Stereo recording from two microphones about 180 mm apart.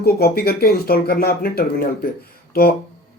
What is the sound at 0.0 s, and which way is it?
Speech, 60° left (ahead or behind).